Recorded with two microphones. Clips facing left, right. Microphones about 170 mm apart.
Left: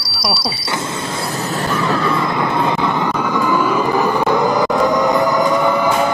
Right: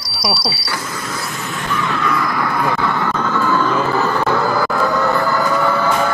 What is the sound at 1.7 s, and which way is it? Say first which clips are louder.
Vehicle: left 1 dB; 35° left (ahead or behind).